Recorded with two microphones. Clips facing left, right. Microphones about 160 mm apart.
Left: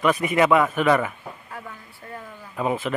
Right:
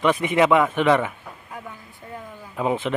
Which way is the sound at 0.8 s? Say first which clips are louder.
Right 1 dB; centre (ahead or behind).